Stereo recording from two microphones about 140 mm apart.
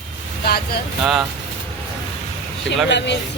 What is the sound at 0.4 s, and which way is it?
Speech, 90° left.